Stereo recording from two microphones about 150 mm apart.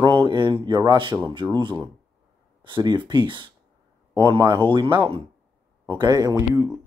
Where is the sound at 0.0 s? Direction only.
35° right (ahead or behind).